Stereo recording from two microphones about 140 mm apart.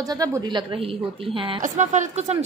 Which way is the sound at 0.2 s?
25° right (ahead or behind).